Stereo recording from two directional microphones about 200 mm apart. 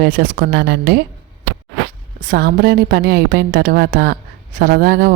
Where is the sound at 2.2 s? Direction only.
45° right (ahead or behind).